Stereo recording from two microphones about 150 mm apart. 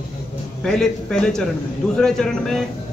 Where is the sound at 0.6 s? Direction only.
5° left (ahead or behind).